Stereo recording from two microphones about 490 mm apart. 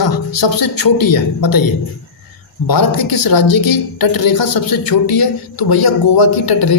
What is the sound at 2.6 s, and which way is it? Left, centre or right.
A man's voice, left.